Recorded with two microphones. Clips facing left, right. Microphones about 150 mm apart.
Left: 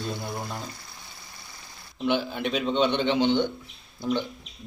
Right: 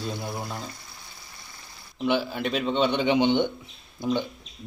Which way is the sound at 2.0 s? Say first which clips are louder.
Right 1 dB; centre (ahead or behind).